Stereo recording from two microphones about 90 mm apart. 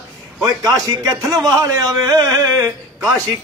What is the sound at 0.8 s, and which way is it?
A man's voice, 40° right (ahead or behind).